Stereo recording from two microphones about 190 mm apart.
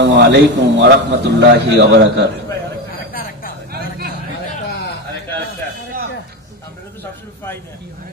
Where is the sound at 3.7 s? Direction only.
55° right (ahead or behind).